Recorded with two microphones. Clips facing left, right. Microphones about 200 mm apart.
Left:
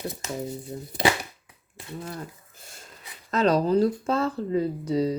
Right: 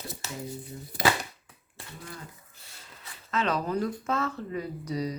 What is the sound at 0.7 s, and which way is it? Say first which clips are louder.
Speech: left 6 dB; 40° left (ahead or behind).